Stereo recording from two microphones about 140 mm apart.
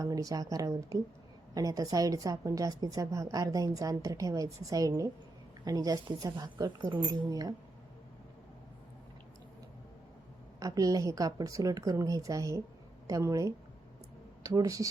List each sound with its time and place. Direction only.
0.0 s a woman's voice: 25° right (ahead or behind)
10.6 s a woman's voice: 25° right (ahead or behind)